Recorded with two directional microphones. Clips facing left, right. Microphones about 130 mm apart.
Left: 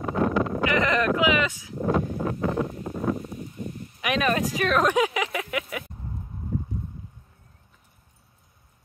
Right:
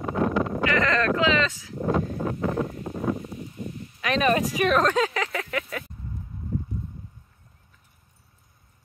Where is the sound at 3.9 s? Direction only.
15° left (ahead or behind).